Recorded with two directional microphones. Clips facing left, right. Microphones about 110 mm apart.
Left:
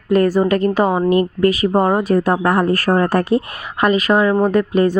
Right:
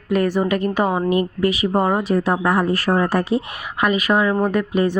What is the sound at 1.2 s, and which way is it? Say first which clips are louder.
Speech: left 4 dB; 45° left (ahead or behind).